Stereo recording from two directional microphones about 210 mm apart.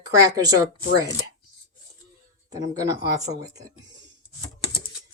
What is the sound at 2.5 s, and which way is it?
Speech, 15° right (ahead or behind).